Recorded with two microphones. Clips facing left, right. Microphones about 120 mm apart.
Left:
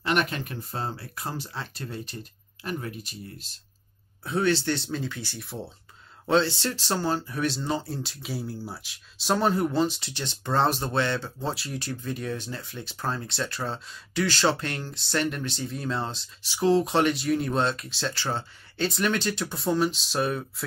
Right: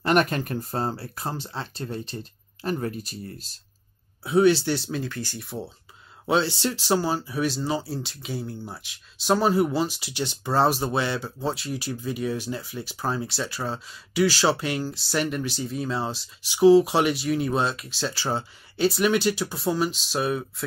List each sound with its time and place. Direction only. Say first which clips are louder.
0.0 s speech: right 5 dB; 45° right (ahead or behind)
4.2 s speech: right 6 dB; 10° right (ahead or behind)
6.2 s speech: even; 10° right (ahead or behind)
16.4 s speech: right 7 dB; 15° right (ahead or behind)